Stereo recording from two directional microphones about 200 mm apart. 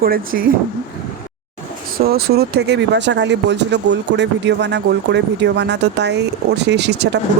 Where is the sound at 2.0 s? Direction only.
50° right (ahead or behind).